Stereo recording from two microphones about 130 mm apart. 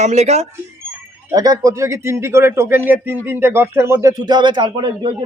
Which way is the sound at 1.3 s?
30° right (ahead or behind).